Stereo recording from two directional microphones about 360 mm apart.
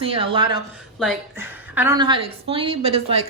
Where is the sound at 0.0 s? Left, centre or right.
Centre.